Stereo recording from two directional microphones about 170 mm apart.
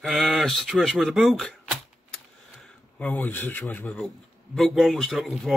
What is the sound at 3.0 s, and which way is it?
Speech, 10° left (ahead or behind).